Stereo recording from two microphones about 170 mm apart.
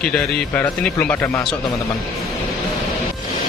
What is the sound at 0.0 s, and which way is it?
A man's voice, 5° left (ahead or behind).